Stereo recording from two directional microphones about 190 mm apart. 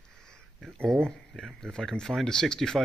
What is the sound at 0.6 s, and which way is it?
Speech, 5° left (ahead or behind).